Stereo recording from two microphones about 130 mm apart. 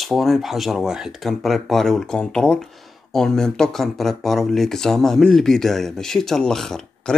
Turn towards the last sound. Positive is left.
turn(degrees=5)  # may be behind; listen again after turning